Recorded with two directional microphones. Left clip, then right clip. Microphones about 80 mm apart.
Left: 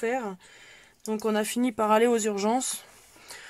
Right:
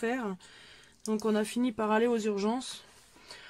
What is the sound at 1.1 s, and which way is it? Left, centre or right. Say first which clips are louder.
Speech: left 3 dB; left.